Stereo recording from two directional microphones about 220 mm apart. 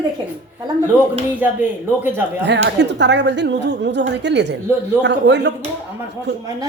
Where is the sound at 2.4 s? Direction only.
50° right (ahead or behind).